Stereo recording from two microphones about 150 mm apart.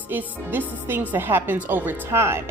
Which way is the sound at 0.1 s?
10° right (ahead or behind).